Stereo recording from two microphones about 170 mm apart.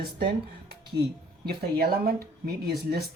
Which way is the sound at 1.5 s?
65° right (ahead or behind).